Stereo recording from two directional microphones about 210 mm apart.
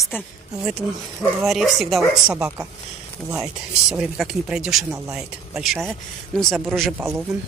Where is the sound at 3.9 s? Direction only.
5° right (ahead or behind).